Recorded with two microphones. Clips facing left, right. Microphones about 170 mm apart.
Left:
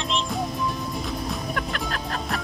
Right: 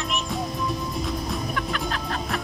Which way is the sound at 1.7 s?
40° left (ahead or behind).